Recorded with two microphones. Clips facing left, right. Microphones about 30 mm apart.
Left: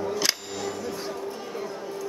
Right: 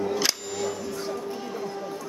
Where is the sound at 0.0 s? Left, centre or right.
Centre.